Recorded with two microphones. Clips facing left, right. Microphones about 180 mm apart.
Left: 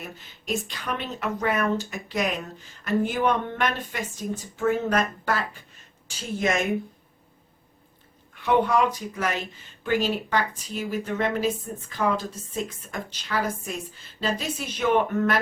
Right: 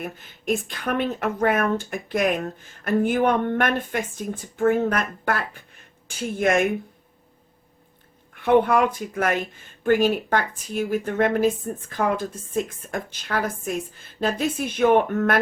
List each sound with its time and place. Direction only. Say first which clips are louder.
0.0 s speech: right 8 dB; 55° right (ahead or behind)
8.4 s speech: right 4 dB; 55° right (ahead or behind)